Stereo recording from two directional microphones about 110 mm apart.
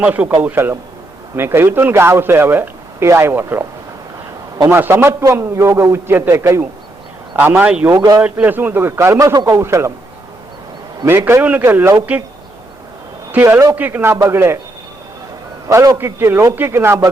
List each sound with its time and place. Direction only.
0.0 s speech: 15° right (ahead or behind)
4.7 s speech: 20° right (ahead or behind)
7.9 s a man's voice: 40° right (ahead or behind)
8.2 s speech: 15° right (ahead or behind)
11.0 s speech: 25° right (ahead or behind)
13.3 s speech: 20° right (ahead or behind)
15.7 s a man's voice: 30° right (ahead or behind)